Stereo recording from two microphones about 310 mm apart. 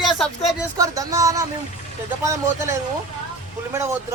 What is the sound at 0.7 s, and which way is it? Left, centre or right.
Speech, centre.